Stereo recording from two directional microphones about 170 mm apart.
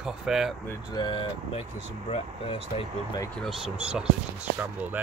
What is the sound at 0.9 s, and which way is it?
Speech, 25° left (ahead or behind).